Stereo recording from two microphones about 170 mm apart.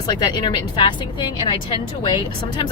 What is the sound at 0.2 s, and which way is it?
Speech, 25° left (ahead or behind).